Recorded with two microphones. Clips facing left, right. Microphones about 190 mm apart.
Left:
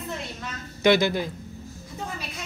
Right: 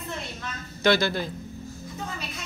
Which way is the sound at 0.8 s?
15° left (ahead or behind).